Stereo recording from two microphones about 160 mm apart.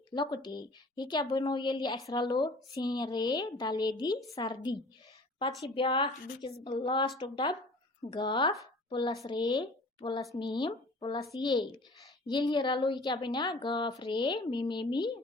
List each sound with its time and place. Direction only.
0.1 s speech: 25° left (ahead or behind)
5.5 s a woman's voice: centre (ahead or behind)
5.7 s speech: 30° left (ahead or behind)